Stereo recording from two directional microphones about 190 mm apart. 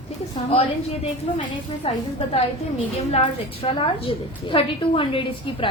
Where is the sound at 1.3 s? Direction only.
30° left (ahead or behind).